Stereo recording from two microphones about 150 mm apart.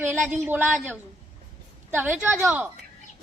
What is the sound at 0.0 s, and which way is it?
Speech, 10° right (ahead or behind).